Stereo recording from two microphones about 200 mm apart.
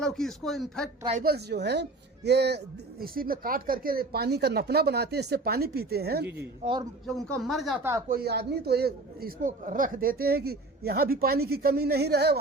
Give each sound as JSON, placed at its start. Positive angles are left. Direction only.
{"t": 0.0, "sound": "speech", "side_deg": 0}
{"t": 1.2, "sound": "speech", "side_deg": -55}
{"t": 6.6, "sound": "a man's voice", "side_deg": -25}
{"t": 7.1, "sound": "speech", "side_deg": 0}
{"t": 8.0, "sound": "speech", "side_deg": -50}